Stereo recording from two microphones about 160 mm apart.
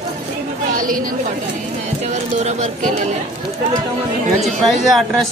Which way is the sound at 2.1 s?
45° right (ahead or behind).